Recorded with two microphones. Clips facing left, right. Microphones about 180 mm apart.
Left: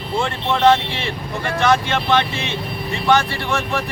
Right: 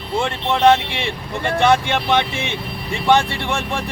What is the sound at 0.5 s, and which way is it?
Speech, 20° right (ahead or behind).